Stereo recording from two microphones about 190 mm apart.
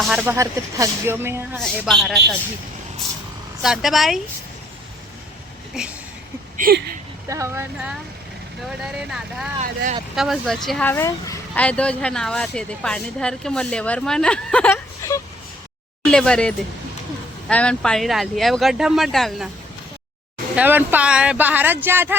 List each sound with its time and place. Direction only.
0.0 s speech: 5° right (ahead or behind)
1.5 s speech: centre (ahead or behind)
3.6 s speech: centre (ahead or behind)
6.6 s speech: 55° right (ahead or behind)
7.3 s speech: 15° right (ahead or behind)
8.8 s speech: 5° right (ahead or behind)
9.6 s speech: 40° right (ahead or behind)
10.2 s speech: centre (ahead or behind)
16.0 s speech: 5° left (ahead or behind)
20.6 s speech: 10° right (ahead or behind)